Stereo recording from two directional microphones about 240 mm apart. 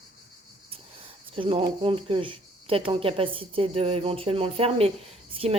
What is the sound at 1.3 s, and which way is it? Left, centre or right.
Speech, right.